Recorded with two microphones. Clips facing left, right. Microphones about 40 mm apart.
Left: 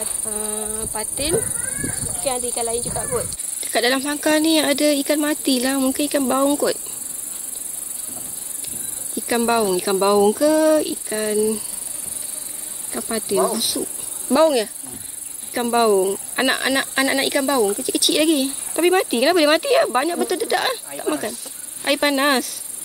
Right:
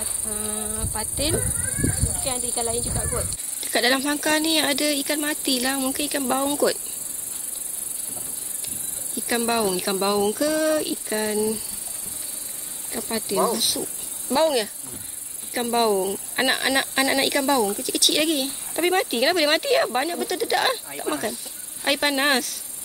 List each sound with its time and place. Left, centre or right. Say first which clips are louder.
0.3 s speech: left 3 dB; centre
2.0 s cat: right 1 dB; left
2.5 s speech: left 3 dB; centre
8.6 s speech: left 2 dB; centre
12.9 s speech: left 4 dB; centre